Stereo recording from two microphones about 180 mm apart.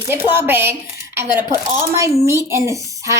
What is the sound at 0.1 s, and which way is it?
Speech, 15° right (ahead or behind).